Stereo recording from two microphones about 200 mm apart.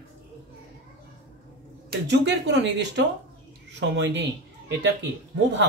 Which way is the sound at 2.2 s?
65° right (ahead or behind).